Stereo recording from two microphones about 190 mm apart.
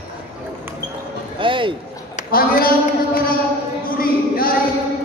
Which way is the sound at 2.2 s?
50° left (ahead or behind).